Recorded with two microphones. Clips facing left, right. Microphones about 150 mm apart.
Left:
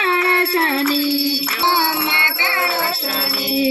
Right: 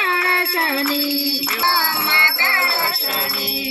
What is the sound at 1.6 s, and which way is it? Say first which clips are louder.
Music: left 4 dB; 15° left (ahead or behind).